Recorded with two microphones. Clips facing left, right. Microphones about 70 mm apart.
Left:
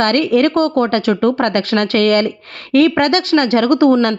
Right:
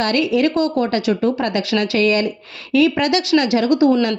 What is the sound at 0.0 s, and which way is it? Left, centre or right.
A woman's voice, left.